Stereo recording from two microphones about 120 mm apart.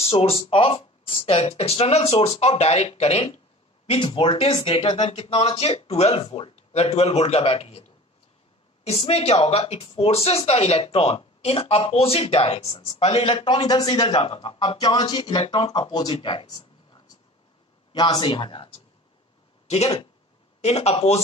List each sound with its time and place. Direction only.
0.0 s speech: 55° left (ahead or behind)
3.8 s speech: 50° left (ahead or behind)
8.8 s speech: 55° left (ahead or behind)
19.7 s speech: 60° left (ahead or behind)